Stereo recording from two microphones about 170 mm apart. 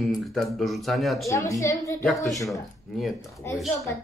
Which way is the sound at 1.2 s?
20° left (ahead or behind).